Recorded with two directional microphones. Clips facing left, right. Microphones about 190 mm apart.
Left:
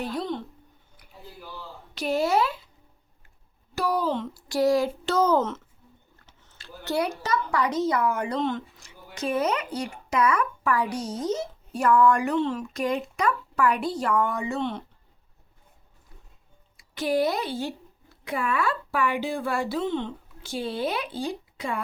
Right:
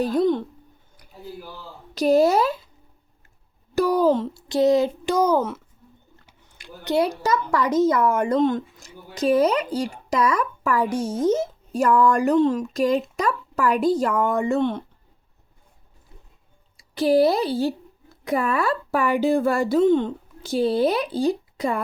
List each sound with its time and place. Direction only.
0.0 s a woman's voice: 50° right (ahead or behind)
2.0 s speech: 40° right (ahead or behind)
3.8 s a sound: 45° right (ahead or behind)
4.4 s a child's voice: 20° right (ahead or behind)
6.2 s a sound: 15° right (ahead or behind)
7.1 s speech: 45° right (ahead or behind)
16.9 s speech: 35° right (ahead or behind)